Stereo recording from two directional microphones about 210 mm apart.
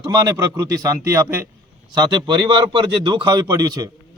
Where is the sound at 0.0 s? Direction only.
15° right (ahead or behind).